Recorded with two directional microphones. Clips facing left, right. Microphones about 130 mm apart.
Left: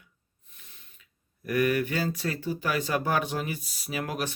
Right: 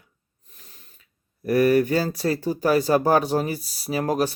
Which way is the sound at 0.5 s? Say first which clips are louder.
Right 4 dB; 40° right (ahead or behind).